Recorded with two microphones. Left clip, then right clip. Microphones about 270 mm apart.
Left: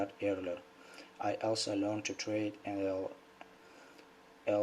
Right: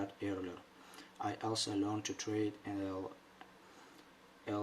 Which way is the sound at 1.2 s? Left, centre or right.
Right.